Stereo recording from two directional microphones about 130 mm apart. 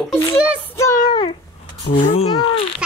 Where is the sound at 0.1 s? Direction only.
20° left (ahead or behind); by 1.3 s 35° left (ahead or behind).